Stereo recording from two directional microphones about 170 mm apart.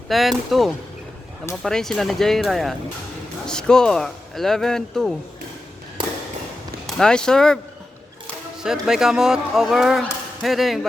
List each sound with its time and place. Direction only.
0.1 s speech: centre (ahead or behind)
6.0 s fireworks: 30° right (ahead or behind)
6.8 s speech: 5° left (ahead or behind)
8.6 s speech: 5° right (ahead or behind)